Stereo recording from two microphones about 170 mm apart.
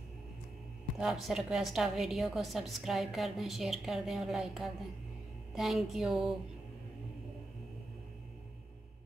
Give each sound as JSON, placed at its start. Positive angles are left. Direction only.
{"t": 0.9, "sound": "a woman's voice", "side_deg": -5}